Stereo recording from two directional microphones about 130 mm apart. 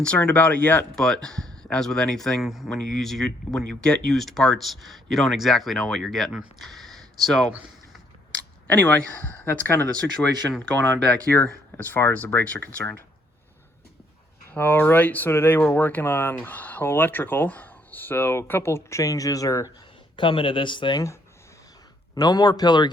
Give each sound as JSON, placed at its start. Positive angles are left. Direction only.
{"t": 0.0, "sound": "speech", "side_deg": 10}
{"t": 8.6, "sound": "speech", "side_deg": 15}
{"t": 14.5, "sound": "speech", "side_deg": 15}
{"t": 20.1, "sound": "speech", "side_deg": 40}
{"t": 22.1, "sound": "speech", "side_deg": 30}